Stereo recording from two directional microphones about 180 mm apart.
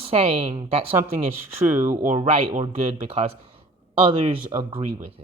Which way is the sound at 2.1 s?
30° right (ahead or behind).